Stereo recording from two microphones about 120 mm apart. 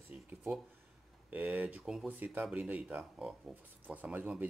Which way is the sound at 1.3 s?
10° right (ahead or behind).